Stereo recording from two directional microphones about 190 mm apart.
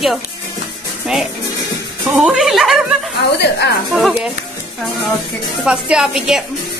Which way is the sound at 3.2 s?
60° left (ahead or behind).